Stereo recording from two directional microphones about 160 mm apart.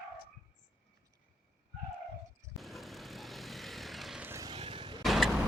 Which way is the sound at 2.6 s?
Centre (ahead or behind).